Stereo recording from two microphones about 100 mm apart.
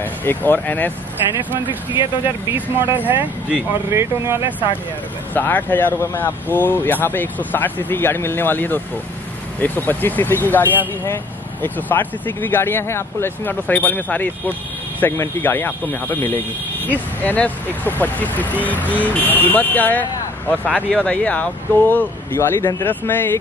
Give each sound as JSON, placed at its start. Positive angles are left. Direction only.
{"t": 0.0, "sound": "speech", "side_deg": 20}
{"t": 1.3, "sound": "speech", "side_deg": -20}
{"t": 5.3, "sound": "speech", "side_deg": 20}